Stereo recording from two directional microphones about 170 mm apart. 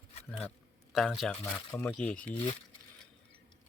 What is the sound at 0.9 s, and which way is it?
Speech, centre (ahead or behind).